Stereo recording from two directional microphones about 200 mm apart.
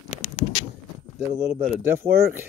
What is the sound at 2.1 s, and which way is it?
Speech, 50° right (ahead or behind).